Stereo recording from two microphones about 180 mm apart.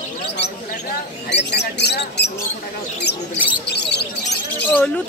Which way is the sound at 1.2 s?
70° left (ahead or behind).